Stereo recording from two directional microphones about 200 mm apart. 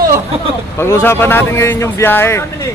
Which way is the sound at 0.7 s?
10° left (ahead or behind).